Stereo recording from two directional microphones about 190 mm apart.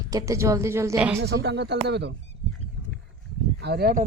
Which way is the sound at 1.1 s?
65° right (ahead or behind).